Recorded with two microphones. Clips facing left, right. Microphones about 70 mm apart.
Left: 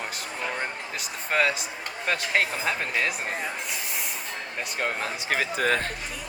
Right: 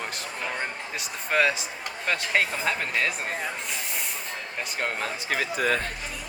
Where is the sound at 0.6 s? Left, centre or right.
Centre.